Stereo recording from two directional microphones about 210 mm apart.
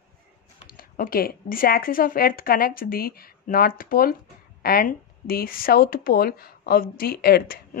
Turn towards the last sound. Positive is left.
turn(degrees=45)  # may be behind; listen again after turning